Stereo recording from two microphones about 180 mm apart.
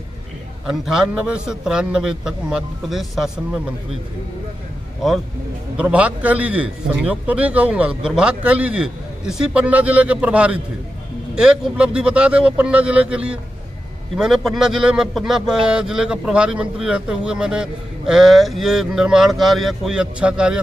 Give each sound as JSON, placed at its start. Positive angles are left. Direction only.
{"t": 0.7, "sound": "a man's voice", "side_deg": -5}
{"t": 5.8, "sound": "a man's voice", "side_deg": -5}